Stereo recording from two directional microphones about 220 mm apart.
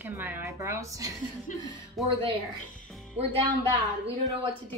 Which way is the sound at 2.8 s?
Centre (ahead or behind).